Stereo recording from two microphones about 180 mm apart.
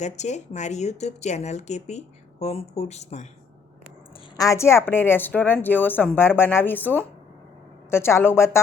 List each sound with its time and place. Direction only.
0.0 s speech: 40° left (ahead or behind)
4.4 s a woman's voice: 15° left (ahead or behind)